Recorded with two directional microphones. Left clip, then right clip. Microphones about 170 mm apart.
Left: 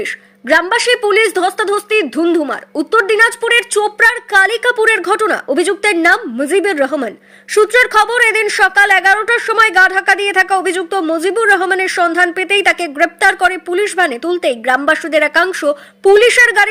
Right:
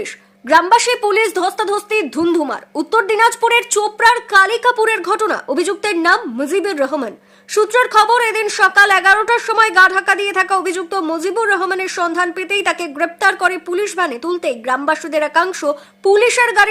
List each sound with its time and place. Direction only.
0.0 s speech: 5° left (ahead or behind)